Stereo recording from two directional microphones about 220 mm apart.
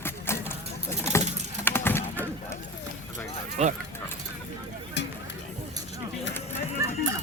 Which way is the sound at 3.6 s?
30° right (ahead or behind).